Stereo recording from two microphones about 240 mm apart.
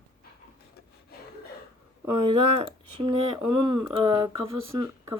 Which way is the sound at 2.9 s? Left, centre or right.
Right.